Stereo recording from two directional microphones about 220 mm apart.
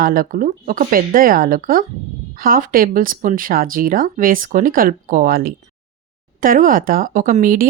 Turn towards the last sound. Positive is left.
turn(degrees=-40)  # may be behind; listen again after turning